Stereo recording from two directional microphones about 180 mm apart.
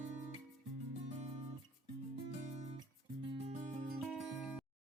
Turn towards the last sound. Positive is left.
turn(degrees=-5)  # may be behind; listen again after turning